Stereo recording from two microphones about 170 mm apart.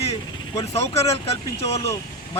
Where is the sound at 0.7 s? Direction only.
40° left (ahead or behind).